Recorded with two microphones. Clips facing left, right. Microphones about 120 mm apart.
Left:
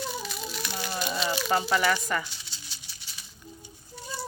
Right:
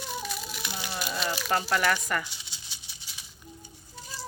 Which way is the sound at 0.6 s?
15° right (ahead or behind).